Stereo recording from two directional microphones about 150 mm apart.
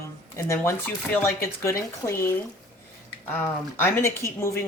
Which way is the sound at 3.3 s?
15° left (ahead or behind).